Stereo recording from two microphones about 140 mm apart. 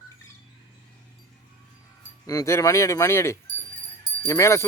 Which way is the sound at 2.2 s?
25° left (ahead or behind).